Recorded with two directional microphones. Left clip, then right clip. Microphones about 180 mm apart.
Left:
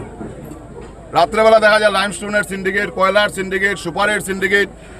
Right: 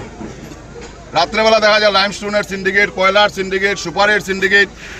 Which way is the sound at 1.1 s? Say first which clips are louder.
Left 1 dB; 25° left (ahead or behind).